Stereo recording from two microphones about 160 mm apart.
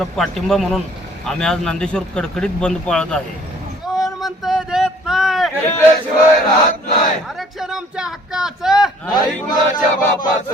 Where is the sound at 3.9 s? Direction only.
Centre (ahead or behind).